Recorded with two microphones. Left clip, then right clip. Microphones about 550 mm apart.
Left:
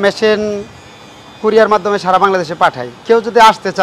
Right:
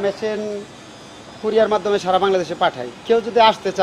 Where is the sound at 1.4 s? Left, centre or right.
Left.